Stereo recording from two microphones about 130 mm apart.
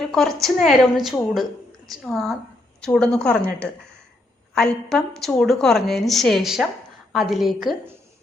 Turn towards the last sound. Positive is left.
turn(degrees=0)  # may be behind; listen again after turning